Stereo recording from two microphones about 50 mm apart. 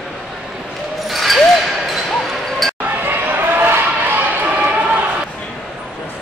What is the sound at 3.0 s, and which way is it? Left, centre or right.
Basketball bounce, right.